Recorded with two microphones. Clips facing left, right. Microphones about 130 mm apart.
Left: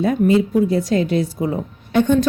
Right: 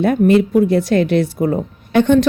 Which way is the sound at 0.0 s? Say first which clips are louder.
Right 3 dB; 70° right (ahead or behind).